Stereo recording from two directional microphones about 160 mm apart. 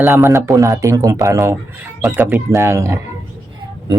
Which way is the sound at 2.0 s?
10° right (ahead or behind).